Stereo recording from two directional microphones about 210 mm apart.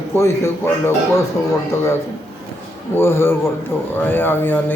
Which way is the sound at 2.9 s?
10° left (ahead or behind).